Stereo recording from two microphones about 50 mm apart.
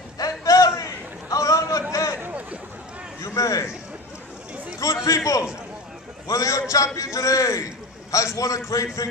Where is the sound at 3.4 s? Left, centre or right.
Left.